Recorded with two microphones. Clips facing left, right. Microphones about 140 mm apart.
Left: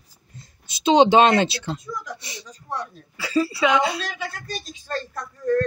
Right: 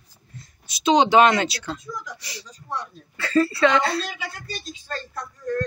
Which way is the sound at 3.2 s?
10° left (ahead or behind).